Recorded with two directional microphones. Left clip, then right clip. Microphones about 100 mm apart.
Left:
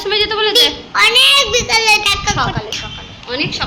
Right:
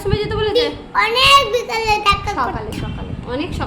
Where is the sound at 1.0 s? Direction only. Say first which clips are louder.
Left 2 dB; 75° right (ahead or behind).